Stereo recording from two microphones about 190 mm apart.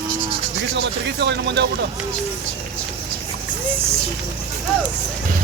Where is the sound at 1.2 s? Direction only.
65° right (ahead or behind).